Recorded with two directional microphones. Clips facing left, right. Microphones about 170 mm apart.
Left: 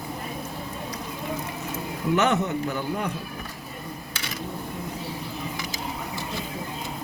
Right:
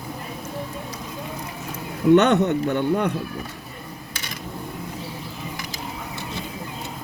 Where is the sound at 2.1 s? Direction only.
65° right (ahead or behind).